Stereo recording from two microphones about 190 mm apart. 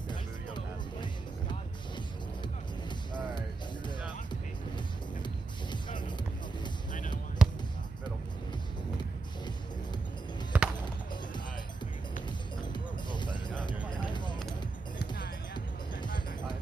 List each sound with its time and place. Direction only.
6.9 s basketball bounce: 45° left (ahead or behind)
7.4 s basketball bounce: 5° right (ahead or behind)
10.5 s music: 5° right (ahead or behind)
12.5 s music: 25° left (ahead or behind)
13.8 s a sound: 25° left (ahead or behind)
15.0 s music: 60° left (ahead or behind)